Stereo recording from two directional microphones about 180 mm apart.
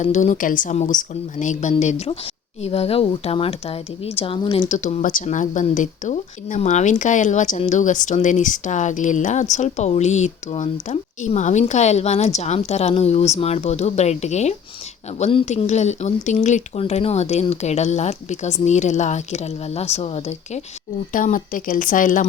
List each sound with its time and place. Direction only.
0.0 s speech: 40° left (ahead or behind)
21.1 s speech: 50° left (ahead or behind)